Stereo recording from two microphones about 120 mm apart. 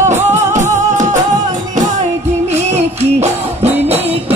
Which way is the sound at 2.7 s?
65° right (ahead or behind).